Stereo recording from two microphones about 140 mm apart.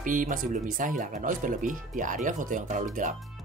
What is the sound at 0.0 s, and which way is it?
Speech, 70° right (ahead or behind).